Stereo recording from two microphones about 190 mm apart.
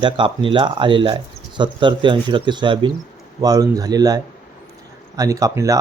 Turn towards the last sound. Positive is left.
turn(degrees=-15)  # may be behind; listen again after turning